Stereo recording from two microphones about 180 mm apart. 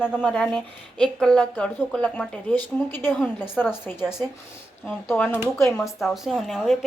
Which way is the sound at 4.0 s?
5° right (ahead or behind).